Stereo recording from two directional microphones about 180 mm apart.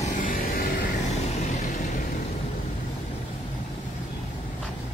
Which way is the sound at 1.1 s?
40° left (ahead or behind).